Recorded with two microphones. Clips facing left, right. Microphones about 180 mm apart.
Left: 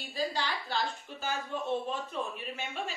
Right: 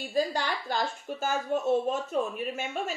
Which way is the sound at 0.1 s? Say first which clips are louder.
Right 5 dB; 45° right (ahead or behind).